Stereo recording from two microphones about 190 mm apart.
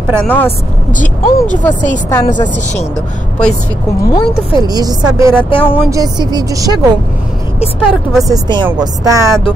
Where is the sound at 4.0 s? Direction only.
20° left (ahead or behind).